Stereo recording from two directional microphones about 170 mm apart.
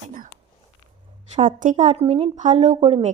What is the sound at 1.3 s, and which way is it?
A woman's voice, 50° right (ahead or behind).